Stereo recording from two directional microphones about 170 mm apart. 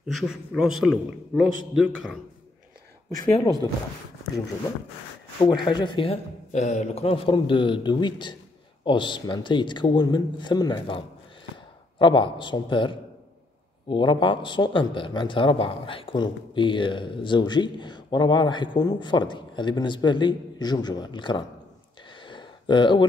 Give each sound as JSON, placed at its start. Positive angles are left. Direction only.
{"t": 0.0, "sound": "a man's voice", "side_deg": 0}
{"t": 3.2, "sound": "speech", "side_deg": 20}
{"t": 5.4, "sound": "speech", "side_deg": 25}
{"t": 6.5, "sound": "a man's voice", "side_deg": 40}
{"t": 22.1, "sound": "a sound", "side_deg": 30}